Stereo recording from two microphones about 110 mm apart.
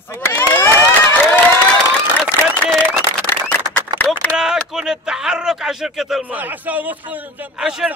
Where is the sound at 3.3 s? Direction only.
15° left (ahead or behind).